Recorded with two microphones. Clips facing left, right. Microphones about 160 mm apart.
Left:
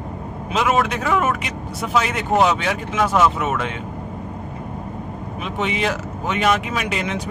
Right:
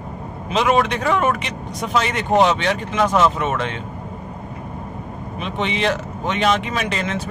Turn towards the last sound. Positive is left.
turn(degrees=10)  # may be behind; listen again after turning